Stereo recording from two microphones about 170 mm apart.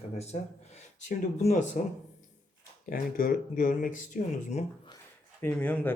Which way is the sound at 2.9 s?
55° left (ahead or behind).